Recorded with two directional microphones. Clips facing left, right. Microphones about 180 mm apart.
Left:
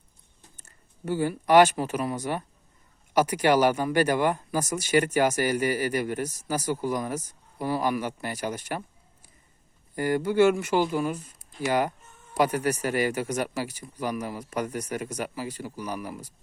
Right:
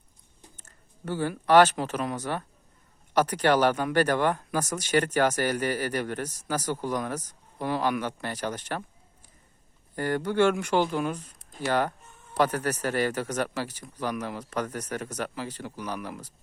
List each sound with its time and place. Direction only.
0.5 s speech: 10° left (ahead or behind)
9.9 s speech: 10° left (ahead or behind)